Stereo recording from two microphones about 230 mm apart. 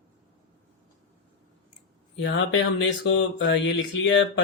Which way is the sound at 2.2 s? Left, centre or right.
Left.